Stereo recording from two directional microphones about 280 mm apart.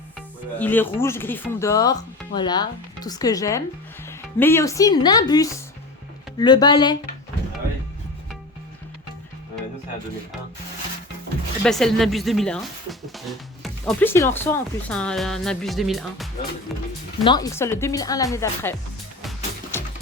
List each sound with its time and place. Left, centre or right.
0.6 s speech: centre
11.6 s speech: centre
17.2 s speech: centre